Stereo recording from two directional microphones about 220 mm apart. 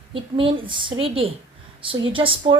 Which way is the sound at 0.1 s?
25° right (ahead or behind).